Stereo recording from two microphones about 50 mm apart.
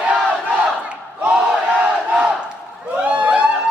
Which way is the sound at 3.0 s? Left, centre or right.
Right.